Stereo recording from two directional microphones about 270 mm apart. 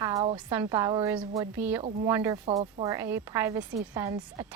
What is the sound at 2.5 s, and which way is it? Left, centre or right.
A woman's voice, right.